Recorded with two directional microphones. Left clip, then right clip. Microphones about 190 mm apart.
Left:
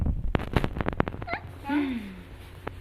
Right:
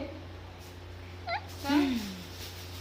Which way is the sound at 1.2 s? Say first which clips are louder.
Even; 15° right (ahead or behind).